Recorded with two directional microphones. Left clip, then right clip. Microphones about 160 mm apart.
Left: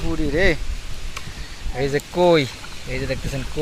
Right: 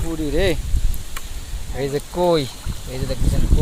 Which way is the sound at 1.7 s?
5° right (ahead or behind).